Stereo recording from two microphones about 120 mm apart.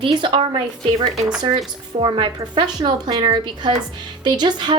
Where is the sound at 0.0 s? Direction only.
45° right (ahead or behind).